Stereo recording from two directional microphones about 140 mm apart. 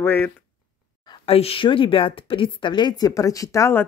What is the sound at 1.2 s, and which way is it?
A woman's voice, 45° left (ahead or behind).